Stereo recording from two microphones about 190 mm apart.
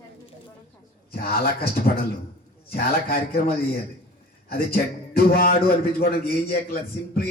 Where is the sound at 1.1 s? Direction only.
55° left (ahead or behind).